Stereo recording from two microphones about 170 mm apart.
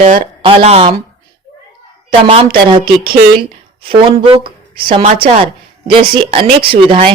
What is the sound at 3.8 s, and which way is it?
A woman's voice, 30° right (ahead or behind).